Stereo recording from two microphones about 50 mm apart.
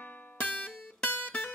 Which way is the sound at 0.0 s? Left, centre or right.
Left.